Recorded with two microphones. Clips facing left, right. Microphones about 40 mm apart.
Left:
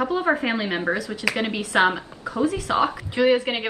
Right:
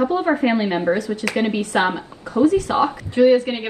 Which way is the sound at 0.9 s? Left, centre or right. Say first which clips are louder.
Right 4 dB; left.